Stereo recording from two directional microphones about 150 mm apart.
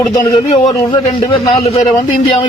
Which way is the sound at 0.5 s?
50° left (ahead or behind).